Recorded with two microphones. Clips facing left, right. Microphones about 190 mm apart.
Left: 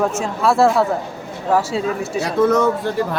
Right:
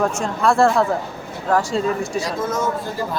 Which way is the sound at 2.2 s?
65° left (ahead or behind).